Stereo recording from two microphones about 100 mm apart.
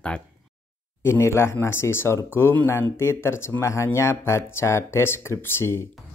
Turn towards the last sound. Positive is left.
turn(degrees=25)  # may be behind; listen again after turning